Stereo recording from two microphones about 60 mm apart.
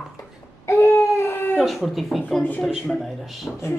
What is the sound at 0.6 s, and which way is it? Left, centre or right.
Baby cry, left.